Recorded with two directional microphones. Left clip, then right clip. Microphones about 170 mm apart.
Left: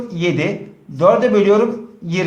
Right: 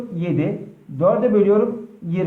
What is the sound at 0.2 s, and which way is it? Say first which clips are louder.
A man's voice: left 5 dB; 20° left (ahead or behind).